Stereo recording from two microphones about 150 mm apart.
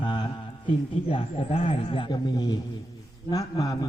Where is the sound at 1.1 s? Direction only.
40° left (ahead or behind).